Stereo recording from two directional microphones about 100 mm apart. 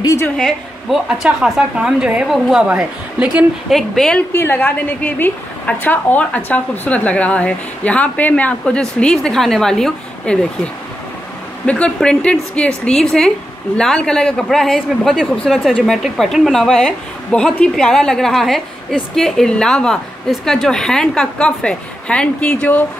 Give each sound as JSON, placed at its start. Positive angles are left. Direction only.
{"t": 0.0, "sound": "a woman's voice", "side_deg": 30}
{"t": 0.4, "sound": "a woman's voice", "side_deg": 0}
{"t": 3.7, "sound": "a woman's voice", "side_deg": 5}
{"t": 4.3, "sound": "a woman's voice", "side_deg": 20}